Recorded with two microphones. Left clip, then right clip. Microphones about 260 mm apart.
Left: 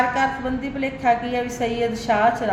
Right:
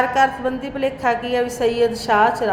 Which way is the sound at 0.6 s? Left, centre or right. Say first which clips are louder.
Right 1 dB; right.